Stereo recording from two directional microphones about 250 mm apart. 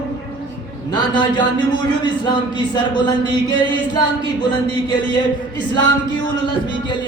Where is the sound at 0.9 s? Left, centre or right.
Centre.